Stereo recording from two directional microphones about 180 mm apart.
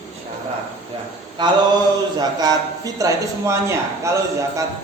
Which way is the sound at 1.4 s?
25° right (ahead or behind).